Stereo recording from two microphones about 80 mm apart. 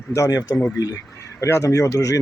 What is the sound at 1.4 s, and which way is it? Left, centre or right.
Speech, left.